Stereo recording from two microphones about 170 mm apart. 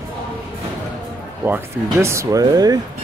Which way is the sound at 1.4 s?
15° right (ahead or behind).